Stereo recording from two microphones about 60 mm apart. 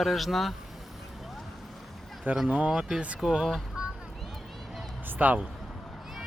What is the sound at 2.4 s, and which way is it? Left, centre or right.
Speech, right.